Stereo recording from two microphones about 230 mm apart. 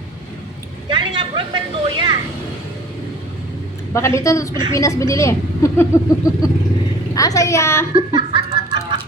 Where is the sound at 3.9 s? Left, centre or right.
Centre.